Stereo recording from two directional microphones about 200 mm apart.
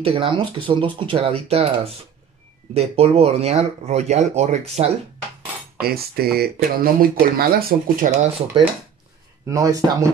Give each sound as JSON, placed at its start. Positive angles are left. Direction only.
{"t": 0.0, "sound": "speech", "side_deg": -30}
{"t": 5.8, "sound": "speech", "side_deg": -50}
{"t": 9.5, "sound": "speech", "side_deg": -15}